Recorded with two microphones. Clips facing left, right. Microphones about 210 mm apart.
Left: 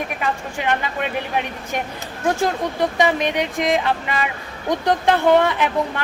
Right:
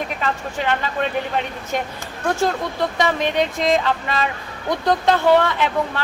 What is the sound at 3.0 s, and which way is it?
Speech, 15° left (ahead or behind).